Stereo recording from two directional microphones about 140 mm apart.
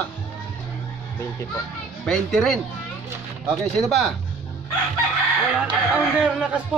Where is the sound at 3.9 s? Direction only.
Centre (ahead or behind).